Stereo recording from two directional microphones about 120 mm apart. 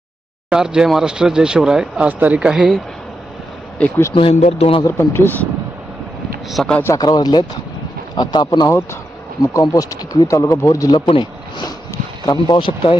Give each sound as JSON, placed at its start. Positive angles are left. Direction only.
{"t": 0.5, "sound": "speech", "side_deg": -5}
{"t": 3.8, "sound": "speech", "side_deg": 15}
{"t": 4.1, "sound": "speech", "side_deg": 50}
{"t": 4.4, "sound": "speech", "side_deg": 65}
{"t": 4.9, "sound": "speech", "side_deg": 20}
{"t": 6.5, "sound": "speech", "side_deg": 0}
{"t": 6.9, "sound": "speech", "side_deg": 35}